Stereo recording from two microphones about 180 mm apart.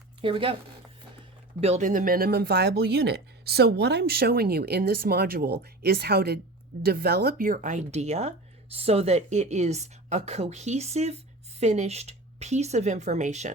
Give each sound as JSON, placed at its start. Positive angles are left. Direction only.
{"t": 0.2, "sound": "speech", "side_deg": -30}
{"t": 1.6, "sound": "a woman's voice", "side_deg": -40}